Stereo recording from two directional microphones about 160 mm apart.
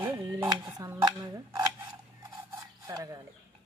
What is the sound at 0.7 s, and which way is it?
Cutlery, 20° right (ahead or behind).